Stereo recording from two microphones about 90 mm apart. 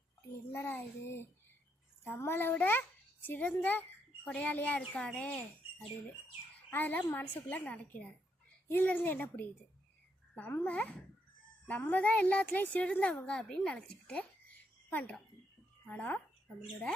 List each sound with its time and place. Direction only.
0.5 s a child's voice: 25° left (ahead or behind)
6.7 s a child's voice: 20° left (ahead or behind)
11.6 s a woman's voice: 20° left (ahead or behind)